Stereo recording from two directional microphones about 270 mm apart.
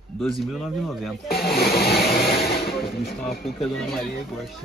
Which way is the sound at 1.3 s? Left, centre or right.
Left.